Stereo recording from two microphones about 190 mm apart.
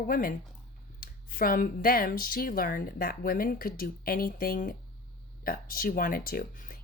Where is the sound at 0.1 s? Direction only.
50° left (ahead or behind).